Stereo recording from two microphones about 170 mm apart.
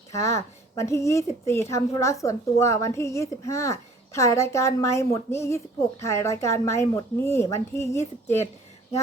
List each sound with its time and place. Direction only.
0.1 s a woman's voice: 15° left (ahead or behind)